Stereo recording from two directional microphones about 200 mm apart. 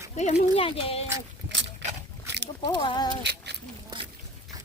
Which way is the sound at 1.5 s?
65° right (ahead or behind).